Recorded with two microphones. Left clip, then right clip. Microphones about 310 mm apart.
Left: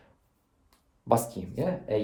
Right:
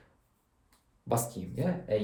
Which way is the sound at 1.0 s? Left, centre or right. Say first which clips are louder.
Left 6 dB; centre.